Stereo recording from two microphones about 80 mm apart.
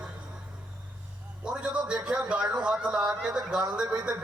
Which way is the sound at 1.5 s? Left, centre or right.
Centre.